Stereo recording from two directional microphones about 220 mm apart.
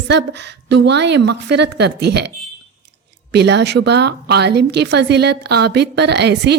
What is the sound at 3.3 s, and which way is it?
A woman's voice, 50° right (ahead or behind).